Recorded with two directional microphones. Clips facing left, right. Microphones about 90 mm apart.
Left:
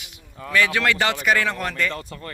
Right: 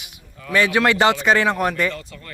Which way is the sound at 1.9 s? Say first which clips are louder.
Left 2 dB; 35° left (ahead or behind).